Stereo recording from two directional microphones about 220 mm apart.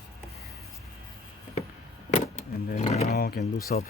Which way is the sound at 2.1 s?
35° left (ahead or behind).